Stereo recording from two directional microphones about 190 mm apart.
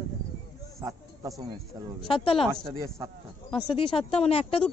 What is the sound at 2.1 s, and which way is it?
Speech, 30° left (ahead or behind).